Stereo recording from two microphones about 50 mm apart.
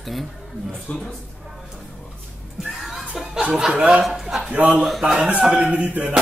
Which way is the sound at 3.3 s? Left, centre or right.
Centre.